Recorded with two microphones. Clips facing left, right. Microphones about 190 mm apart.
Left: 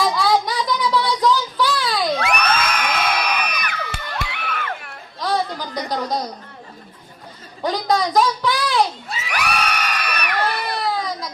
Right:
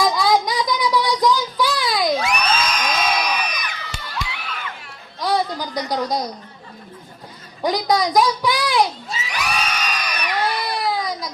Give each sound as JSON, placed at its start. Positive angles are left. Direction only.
{"t": 0.0, "sound": "child singing", "side_deg": -10}
{"t": 2.2, "sound": "crowd", "side_deg": 60}
{"t": 5.2, "sound": "music", "side_deg": -10}
{"t": 6.1, "sound": "a sound", "side_deg": -10}
{"t": 7.6, "sound": "a sound", "side_deg": -10}
{"t": 9.0, "sound": "crowd", "side_deg": 60}
{"t": 10.4, "sound": "baby cry", "side_deg": -10}